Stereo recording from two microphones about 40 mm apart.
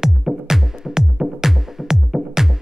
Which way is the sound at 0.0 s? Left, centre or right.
Centre.